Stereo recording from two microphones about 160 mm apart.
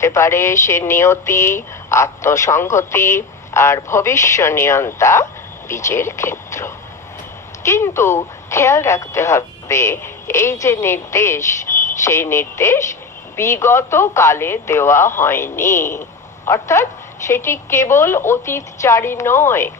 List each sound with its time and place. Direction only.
0.0 s speech: 15° left (ahead or behind)